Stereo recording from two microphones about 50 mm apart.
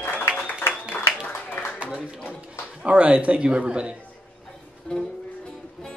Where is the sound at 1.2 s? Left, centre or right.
Left.